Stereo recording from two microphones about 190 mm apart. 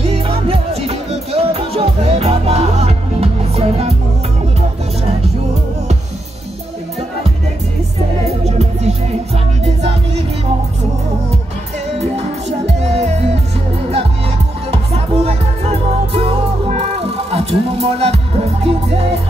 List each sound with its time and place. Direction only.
0.0 s music: 30° right (ahead or behind)
8.5 s music: 35° right (ahead or behind)
12.0 s music: 35° right (ahead or behind)
14.7 s music: 30° right (ahead or behind)